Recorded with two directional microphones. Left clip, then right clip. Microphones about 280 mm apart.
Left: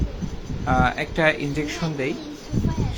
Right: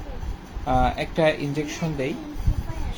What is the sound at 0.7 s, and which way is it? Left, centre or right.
Speech, centre.